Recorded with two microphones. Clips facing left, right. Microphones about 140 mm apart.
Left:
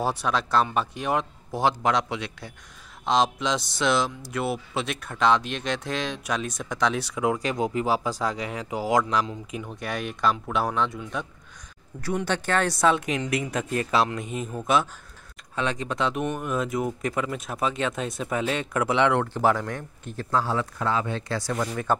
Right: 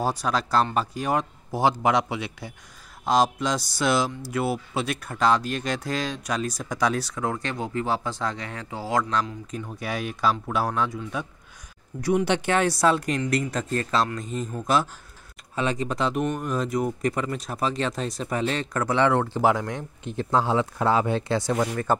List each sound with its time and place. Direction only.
0.0 s speech: centre (ahead or behind)
7.2 s speech: 10° left (ahead or behind)
9.7 s speech: 5° right (ahead or behind)
12.0 s speech: 15° right (ahead or behind); by 18.9 s 5° left (ahead or behind)
19.0 s speech: 10° right (ahead or behind)
20.2 s speech: 25° right (ahead or behind)